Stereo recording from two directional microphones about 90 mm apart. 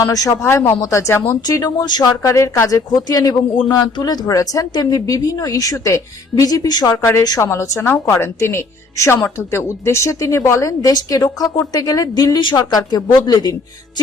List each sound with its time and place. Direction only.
0.0 s speech: 40° left (ahead or behind)
1.5 s a woman's voice: 45° left (ahead or behind)
2.2 s a woman's voice: 35° left (ahead or behind)
6.9 s a woman's voice: 30° left (ahead or behind); by 14.0 s 50° left (ahead or behind)